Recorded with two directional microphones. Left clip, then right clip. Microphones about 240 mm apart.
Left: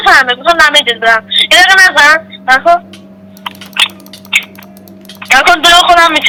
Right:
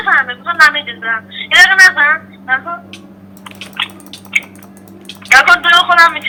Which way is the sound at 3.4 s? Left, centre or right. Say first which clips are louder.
Left 9 dB; left.